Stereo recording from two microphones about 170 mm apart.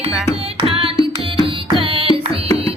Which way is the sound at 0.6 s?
30° right (ahead or behind).